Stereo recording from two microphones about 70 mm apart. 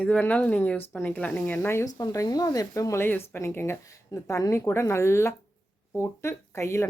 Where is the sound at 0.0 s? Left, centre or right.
Centre.